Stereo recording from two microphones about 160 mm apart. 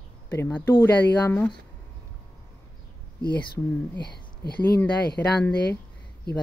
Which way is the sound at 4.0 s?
90° left.